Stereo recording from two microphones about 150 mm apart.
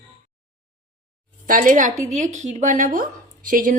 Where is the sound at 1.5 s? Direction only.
65° right (ahead or behind).